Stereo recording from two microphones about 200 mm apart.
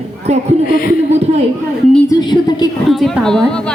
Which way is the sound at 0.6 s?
45° left (ahead or behind).